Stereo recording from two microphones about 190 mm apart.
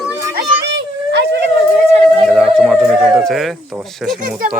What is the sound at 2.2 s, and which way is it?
Music, centre (ahead or behind).